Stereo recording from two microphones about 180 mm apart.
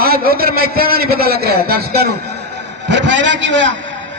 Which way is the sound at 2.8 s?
85° right.